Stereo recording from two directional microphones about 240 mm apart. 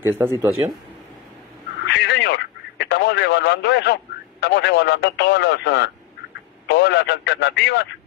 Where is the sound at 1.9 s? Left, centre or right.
Left.